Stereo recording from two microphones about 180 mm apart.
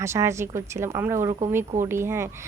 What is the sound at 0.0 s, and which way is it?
A woman's voice, 15° right (ahead or behind).